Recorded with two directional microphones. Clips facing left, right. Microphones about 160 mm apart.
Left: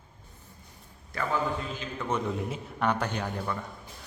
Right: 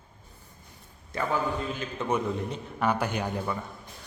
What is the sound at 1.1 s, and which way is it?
A man's voice, 20° right (ahead or behind).